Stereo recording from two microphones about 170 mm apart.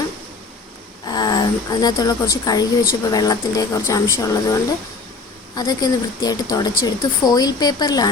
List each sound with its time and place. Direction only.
1.0 s a woman's voice: 25° left (ahead or behind)
5.5 s speech: 25° left (ahead or behind)